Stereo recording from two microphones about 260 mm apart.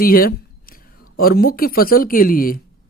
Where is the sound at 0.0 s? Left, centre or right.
Left.